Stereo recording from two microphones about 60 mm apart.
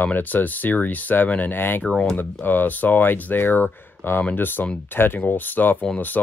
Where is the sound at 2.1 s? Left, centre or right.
Left.